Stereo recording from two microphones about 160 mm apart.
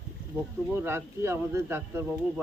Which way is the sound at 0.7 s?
15° right (ahead or behind).